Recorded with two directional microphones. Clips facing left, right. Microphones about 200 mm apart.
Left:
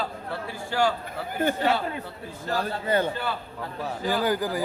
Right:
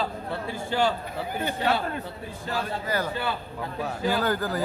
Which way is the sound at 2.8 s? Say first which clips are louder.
Left 6 dB; 25° left (ahead or behind).